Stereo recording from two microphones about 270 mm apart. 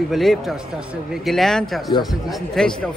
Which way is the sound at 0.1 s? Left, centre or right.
Centre.